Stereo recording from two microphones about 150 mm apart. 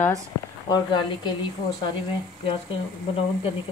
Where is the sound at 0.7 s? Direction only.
30° left (ahead or behind).